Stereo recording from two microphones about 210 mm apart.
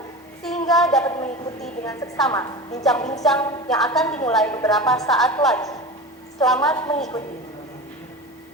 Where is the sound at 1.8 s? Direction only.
15° left (ahead or behind).